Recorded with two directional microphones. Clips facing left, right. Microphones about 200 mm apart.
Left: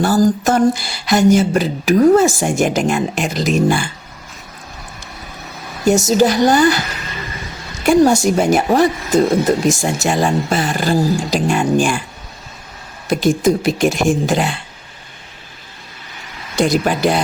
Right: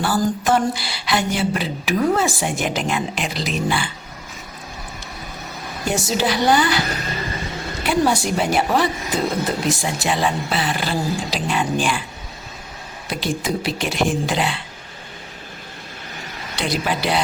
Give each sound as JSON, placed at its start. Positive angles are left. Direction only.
{"t": 0.0, "sound": "speech", "side_deg": 40}
{"t": 5.8, "sound": "speech", "side_deg": 45}
{"t": 6.8, "sound": "music", "side_deg": -35}
{"t": 7.9, "sound": "speech", "side_deg": 45}
{"t": 13.1, "sound": "speech", "side_deg": 45}
{"t": 16.6, "sound": "speech", "side_deg": 45}